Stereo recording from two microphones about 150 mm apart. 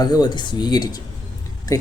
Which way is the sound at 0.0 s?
25° left (ahead or behind).